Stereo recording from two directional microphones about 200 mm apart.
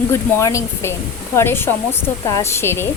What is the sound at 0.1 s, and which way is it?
Speech, 15° left (ahead or behind).